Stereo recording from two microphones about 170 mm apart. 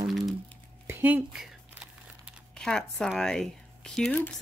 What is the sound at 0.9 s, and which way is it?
Speech, 10° right (ahead or behind).